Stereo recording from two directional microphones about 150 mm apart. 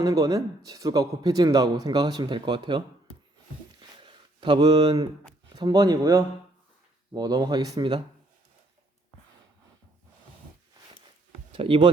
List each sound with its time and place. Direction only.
0.0 s a man's voice: 20° right (ahead or behind)
3.8 s a sound: 30° right (ahead or behind)
5.5 s a man's voice: 25° right (ahead or behind)
11.5 s speech: 35° right (ahead or behind)